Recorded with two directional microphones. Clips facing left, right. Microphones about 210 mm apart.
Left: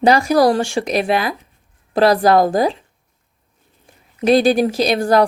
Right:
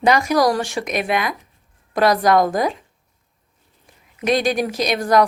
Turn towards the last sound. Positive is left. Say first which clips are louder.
# left 3 dB
turn(degrees=30)  # may be behind; listen again after turning